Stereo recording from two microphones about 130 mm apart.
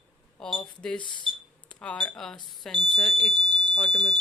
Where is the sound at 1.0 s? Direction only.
35° left (ahead or behind).